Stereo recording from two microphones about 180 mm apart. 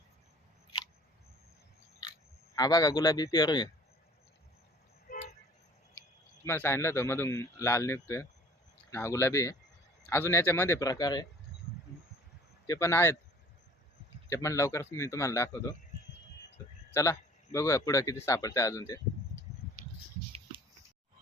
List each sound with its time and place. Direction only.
2.6 s speech: 20° left (ahead or behind)
5.0 s vehicle: 45° left (ahead or behind)
6.4 s speech: 15° left (ahead or behind)
12.6 s speech: 20° left (ahead or behind)
14.3 s speech: 15° left (ahead or behind)
16.9 s speech: 15° left (ahead or behind)